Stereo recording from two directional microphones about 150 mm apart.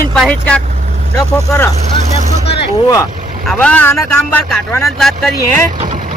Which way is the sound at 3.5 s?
10° left (ahead or behind).